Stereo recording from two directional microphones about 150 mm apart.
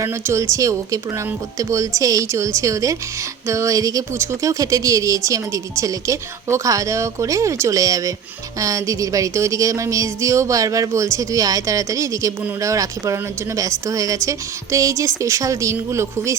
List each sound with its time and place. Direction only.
0.0 s speech: 20° right (ahead or behind)